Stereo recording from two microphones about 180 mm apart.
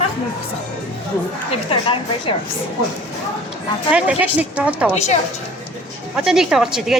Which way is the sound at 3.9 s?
5° right (ahead or behind).